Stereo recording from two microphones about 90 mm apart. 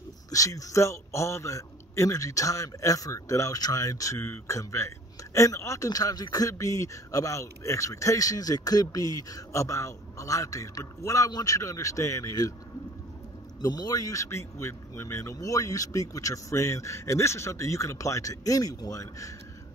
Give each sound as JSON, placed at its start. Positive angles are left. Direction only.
{"t": 0.3, "sound": "a man's voice", "side_deg": 40}
{"t": 13.6, "sound": "a man's voice", "side_deg": 50}